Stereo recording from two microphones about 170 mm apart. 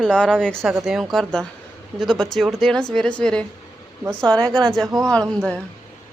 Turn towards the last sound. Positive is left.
turn(degrees=5)  # may be behind; listen again after turning